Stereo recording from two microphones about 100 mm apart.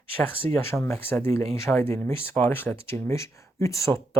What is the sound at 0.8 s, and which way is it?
Speech, 25° left (ahead or behind).